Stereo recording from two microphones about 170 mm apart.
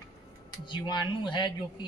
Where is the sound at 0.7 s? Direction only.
25° left (ahead or behind).